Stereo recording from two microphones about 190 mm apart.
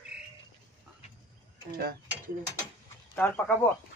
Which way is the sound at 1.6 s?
55° right (ahead or behind).